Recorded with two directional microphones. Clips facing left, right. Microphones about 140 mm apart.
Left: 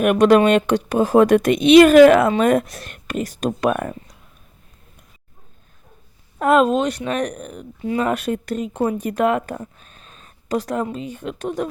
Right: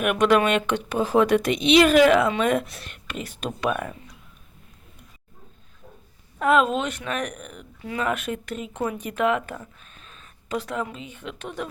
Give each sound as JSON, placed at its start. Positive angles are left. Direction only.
{"t": 0.0, "sound": "speech", "side_deg": 40}
{"t": 6.4, "sound": "speech", "side_deg": 40}